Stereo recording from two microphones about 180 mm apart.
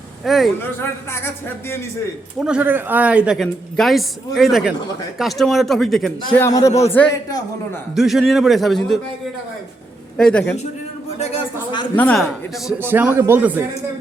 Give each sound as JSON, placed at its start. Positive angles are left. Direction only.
{"t": 0.3, "sound": "speech", "side_deg": 0}
{"t": 2.4, "sound": "speech", "side_deg": -5}
{"t": 6.3, "sound": "a man's voice", "side_deg": 15}
{"t": 7.9, "sound": "speech", "side_deg": 0}
{"t": 10.2, "sound": "speech", "side_deg": 5}
{"t": 11.2, "sound": "speech", "side_deg": 35}
{"t": 11.9, "sound": "a man's voice", "side_deg": 10}
{"t": 12.6, "sound": "a man's voice", "side_deg": -10}